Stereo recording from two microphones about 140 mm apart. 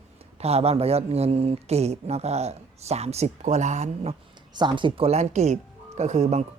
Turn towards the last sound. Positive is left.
turn(degrees=-50)  # may be behind; listen again after turning